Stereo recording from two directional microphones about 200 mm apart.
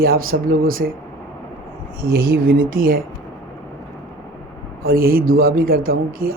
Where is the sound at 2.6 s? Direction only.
75° right (ahead or behind).